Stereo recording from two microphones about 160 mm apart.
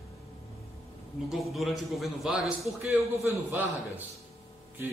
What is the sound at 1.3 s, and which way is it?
Speech, centre (ahead or behind).